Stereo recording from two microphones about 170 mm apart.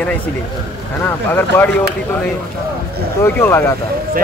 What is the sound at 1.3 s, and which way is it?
Speech, 10° left (ahead or behind).